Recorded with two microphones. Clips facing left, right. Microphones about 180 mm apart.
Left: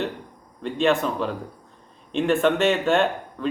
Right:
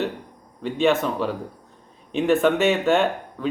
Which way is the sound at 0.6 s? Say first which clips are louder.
Right 1 dB; centre (ahead or behind).